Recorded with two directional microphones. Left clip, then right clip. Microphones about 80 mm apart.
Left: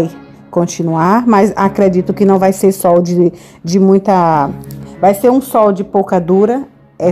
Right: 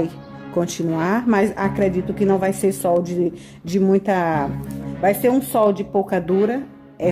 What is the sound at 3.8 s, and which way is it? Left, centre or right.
Speech, left.